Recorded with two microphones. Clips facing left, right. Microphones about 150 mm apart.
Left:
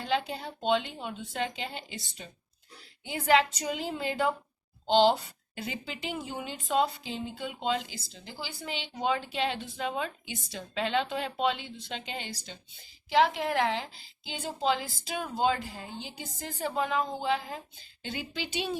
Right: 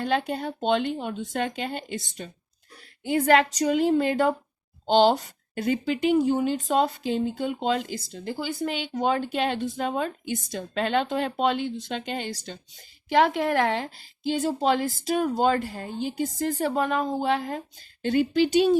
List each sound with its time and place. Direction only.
0.0 s a woman's voice: 55° right (ahead or behind)